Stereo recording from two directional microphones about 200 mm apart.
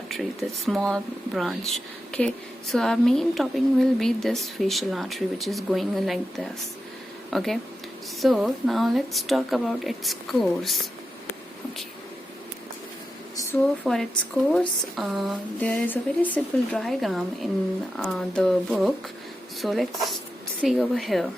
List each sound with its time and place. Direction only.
0.1 s a woman's voice: centre (ahead or behind)
13.3 s a sound: 15° left (ahead or behind)
13.8 s a woman's voice: centre (ahead or behind)